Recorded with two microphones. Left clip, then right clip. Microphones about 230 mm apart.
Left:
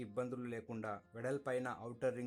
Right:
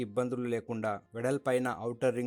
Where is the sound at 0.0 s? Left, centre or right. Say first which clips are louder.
Right 10 dB; right.